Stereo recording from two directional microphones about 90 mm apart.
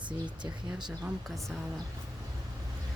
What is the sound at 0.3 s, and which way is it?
Speech, 60° right (ahead or behind).